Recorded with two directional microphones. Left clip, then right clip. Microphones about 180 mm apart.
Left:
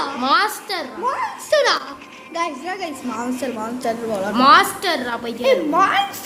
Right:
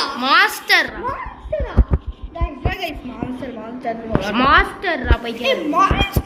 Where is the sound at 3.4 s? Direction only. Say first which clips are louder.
Left 4 dB; 45° left (ahead or behind).